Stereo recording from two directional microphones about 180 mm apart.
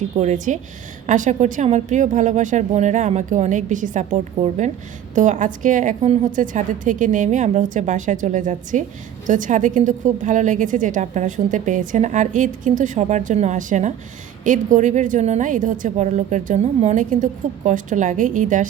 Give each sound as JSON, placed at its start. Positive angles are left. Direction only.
{"t": 0.2, "sound": "a woman's voice", "side_deg": -45}